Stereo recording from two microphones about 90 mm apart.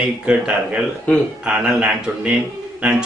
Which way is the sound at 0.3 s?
10° right (ahead or behind).